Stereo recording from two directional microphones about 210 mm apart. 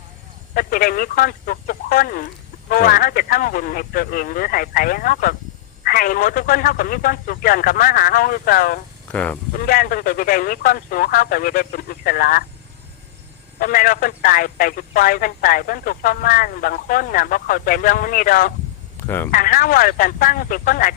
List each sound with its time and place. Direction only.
0.5 s speech: 45° left (ahead or behind)
9.1 s speech: 5° left (ahead or behind)
9.5 s speech: 45° left (ahead or behind)
13.6 s speech: 40° left (ahead or behind)
18.9 s speech: 10° left (ahead or behind)
19.3 s speech: 40° left (ahead or behind)